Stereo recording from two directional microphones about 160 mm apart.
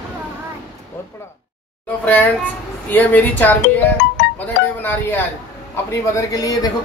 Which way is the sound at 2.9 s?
10° left (ahead or behind).